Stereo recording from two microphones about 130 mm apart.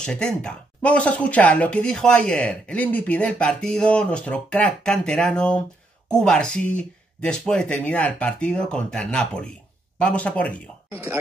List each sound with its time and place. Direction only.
0.0 s speech: 5° left (ahead or behind)
10.9 s speech: 20° right (ahead or behind)